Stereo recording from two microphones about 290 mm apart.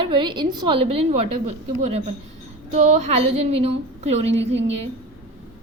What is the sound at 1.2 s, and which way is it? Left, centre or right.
Speech, right.